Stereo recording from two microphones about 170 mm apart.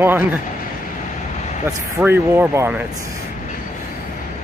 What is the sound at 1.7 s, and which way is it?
Speech, 15° right (ahead or behind).